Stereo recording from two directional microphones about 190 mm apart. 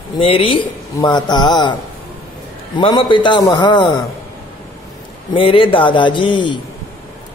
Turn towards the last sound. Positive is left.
turn(degrees=25)  # may be behind; listen again after turning